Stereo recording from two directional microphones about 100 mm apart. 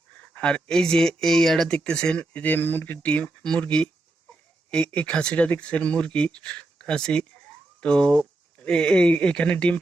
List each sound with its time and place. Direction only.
0.3 s speech: 10° left (ahead or behind)